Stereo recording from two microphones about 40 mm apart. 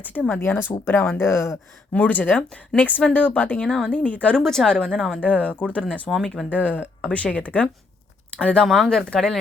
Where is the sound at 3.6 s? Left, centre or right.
Left.